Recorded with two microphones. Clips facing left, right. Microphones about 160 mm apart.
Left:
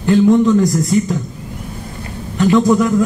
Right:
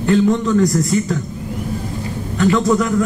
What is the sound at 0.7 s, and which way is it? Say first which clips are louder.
Speech: left 2 dB; 20° left (ahead or behind).